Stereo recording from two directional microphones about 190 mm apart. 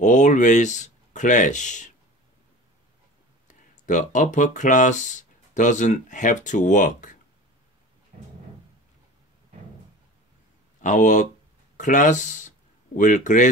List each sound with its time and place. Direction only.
0.0 s speech: 40° left (ahead or behind)
3.8 s speech: 40° left (ahead or behind)
10.8 s speech: 40° left (ahead or behind)